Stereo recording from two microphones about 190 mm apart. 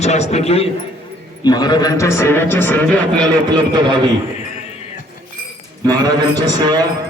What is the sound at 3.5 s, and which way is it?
Speech, 25° right (ahead or behind).